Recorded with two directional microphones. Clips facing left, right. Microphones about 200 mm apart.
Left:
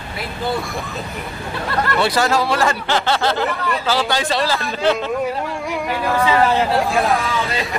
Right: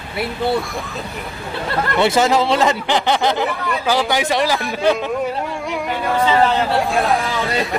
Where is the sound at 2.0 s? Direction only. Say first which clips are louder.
Right 4 dB; 20° right (ahead or behind).